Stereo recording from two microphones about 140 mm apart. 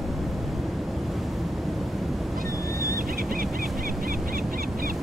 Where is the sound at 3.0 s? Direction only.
90° right.